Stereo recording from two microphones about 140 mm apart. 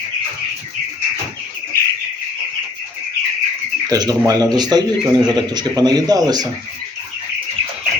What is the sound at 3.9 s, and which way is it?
A man's voice, 25° right (ahead or behind).